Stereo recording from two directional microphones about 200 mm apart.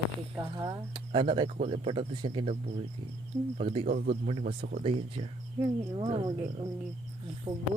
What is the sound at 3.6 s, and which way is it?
Speech, 30° right (ahead or behind).